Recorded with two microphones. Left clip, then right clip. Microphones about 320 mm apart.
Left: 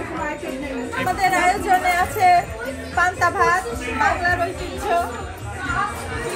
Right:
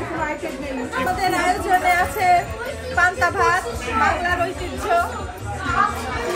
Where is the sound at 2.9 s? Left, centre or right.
Centre.